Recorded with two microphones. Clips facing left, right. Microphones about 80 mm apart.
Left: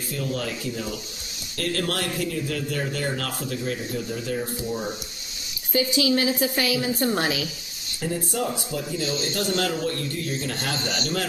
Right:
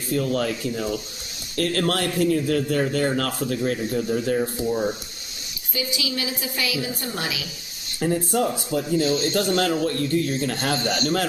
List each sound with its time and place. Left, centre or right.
0.1 s a man's voice: right
6.0 s a woman's voice: left
8.0 s a man's voice: right
8.5 s a man's voice: right